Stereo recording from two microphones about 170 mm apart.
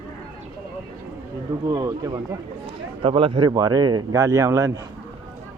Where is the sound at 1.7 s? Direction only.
20° right (ahead or behind).